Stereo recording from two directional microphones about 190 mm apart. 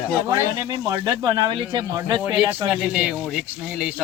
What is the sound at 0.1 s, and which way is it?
Speech, 10° right (ahead or behind).